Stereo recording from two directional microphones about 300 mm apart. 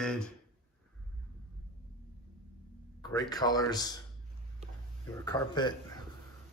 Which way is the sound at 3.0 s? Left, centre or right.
Centre.